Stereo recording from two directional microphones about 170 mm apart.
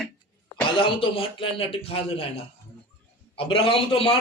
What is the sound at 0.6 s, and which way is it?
A man's voice, 30° left (ahead or behind).